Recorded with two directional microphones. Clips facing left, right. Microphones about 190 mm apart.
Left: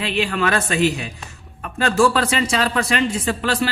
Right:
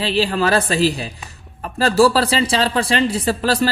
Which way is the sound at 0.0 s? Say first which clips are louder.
Right 3 dB; 35° right (ahead or behind).